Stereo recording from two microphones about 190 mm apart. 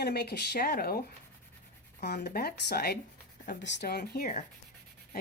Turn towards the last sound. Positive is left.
turn(degrees=55)  # may be behind; listen again after turning